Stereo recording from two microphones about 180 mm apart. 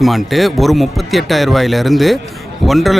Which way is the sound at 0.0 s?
Centre (ahead or behind).